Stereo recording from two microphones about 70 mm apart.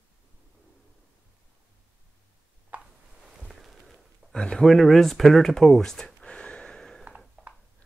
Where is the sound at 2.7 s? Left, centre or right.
Right.